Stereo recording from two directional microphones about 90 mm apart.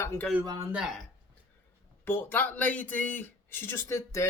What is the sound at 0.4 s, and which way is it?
Speech, 45° right (ahead or behind).